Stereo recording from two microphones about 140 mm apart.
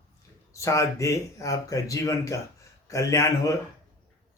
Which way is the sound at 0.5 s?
20° left (ahead or behind).